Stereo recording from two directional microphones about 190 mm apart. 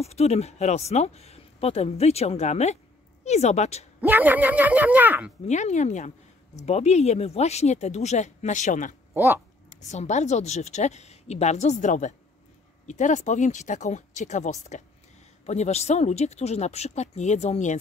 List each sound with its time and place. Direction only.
0.0 s a woman's voice: 35° left (ahead or behind)
4.0 s speech: 10° right (ahead or behind)
5.5 s a woman's voice: 40° left (ahead or behind)
9.1 s speech: 10° right (ahead or behind)
9.8 s a woman's voice: 35° left (ahead or behind)